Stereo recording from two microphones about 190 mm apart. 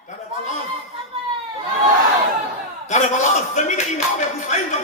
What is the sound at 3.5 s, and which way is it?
Music, 40° left (ahead or behind).